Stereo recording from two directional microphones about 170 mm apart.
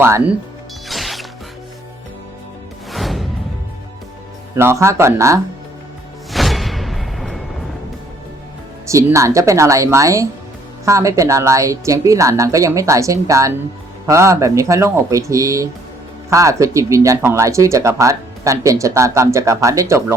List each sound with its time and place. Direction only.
0.0 s speech: 15° right (ahead or behind)
0.9 s mechanisms: centre (ahead or behind)
2.9 s music: centre (ahead or behind)
4.5 s speech: 15° right (ahead or behind)
6.3 s music: centre (ahead or behind)
8.9 s a woman's voice: 15° right (ahead or behind)